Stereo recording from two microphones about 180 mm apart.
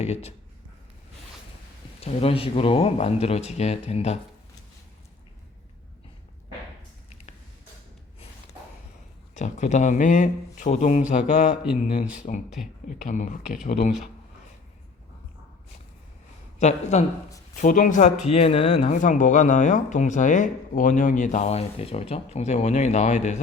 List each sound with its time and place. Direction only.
0.0 s speech: 35° left (ahead or behind)
2.0 s speech: 35° left (ahead or behind)
9.3 s a man's voice: 40° left (ahead or behind)
13.7 s speech: 55° left (ahead or behind)
16.6 s speech: 40° left (ahead or behind)